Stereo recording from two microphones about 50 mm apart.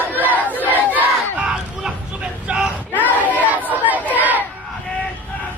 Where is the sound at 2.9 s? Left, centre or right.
Right.